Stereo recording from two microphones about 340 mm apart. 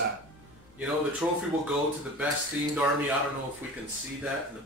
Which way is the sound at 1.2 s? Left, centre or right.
Centre.